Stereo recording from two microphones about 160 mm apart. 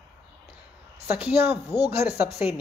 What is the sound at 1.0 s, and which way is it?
Speech, 10° right (ahead or behind).